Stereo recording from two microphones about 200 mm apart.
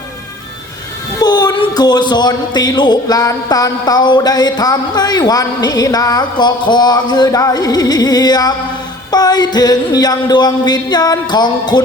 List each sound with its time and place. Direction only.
1.2 s speech: 20° left (ahead or behind)